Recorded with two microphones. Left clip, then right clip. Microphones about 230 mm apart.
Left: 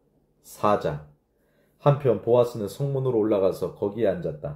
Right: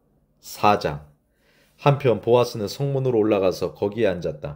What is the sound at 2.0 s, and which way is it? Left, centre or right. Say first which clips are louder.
Speech: right 2 dB; right.